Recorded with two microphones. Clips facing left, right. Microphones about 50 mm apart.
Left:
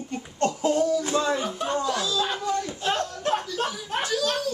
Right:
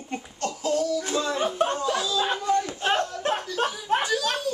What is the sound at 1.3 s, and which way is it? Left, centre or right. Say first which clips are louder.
Speech: right 2 dB; right.